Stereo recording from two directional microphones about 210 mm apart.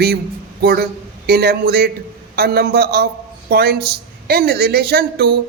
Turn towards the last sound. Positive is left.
turn(degrees=-50)  # may be behind; listen again after turning